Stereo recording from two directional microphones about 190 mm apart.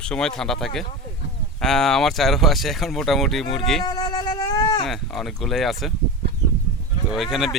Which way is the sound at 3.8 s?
20° left (ahead or behind).